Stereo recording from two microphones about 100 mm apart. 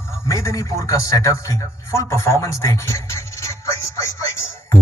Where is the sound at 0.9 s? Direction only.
30° left (ahead or behind).